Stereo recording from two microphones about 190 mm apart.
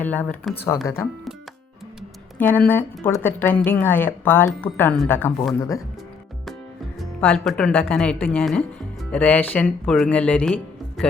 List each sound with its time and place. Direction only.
0.0 s speech: 10° left (ahead or behind)
2.4 s speech: 10° left (ahead or behind)
7.0 s speech: centre (ahead or behind)